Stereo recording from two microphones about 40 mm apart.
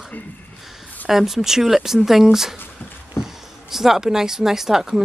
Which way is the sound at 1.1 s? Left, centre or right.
Centre.